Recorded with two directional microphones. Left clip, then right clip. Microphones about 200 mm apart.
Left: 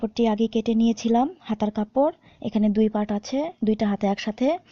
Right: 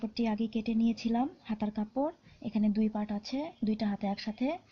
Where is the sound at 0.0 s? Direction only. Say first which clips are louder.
Left 11 dB; 45° left (ahead or behind).